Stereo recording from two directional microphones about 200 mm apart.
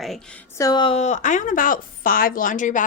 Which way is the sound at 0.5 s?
20° left (ahead or behind).